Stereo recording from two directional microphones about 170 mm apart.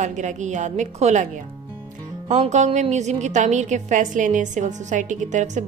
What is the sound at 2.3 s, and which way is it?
Speech, 45° right (ahead or behind).